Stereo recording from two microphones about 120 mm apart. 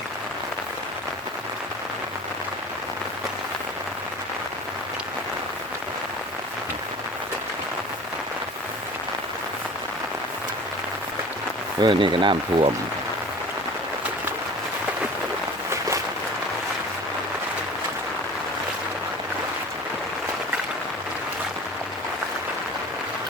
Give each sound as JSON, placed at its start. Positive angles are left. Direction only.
{"t": 11.8, "sound": "speech", "side_deg": -40}